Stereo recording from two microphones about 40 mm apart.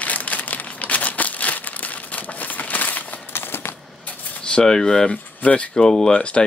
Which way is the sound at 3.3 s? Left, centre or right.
Left.